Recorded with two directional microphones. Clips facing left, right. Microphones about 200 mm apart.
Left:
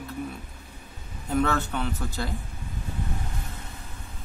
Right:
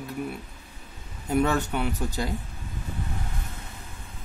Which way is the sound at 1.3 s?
15° right (ahead or behind).